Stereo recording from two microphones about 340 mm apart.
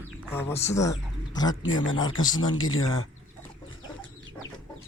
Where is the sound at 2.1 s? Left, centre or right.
Left.